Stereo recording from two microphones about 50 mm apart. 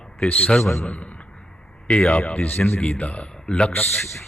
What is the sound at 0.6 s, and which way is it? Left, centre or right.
Speech, left.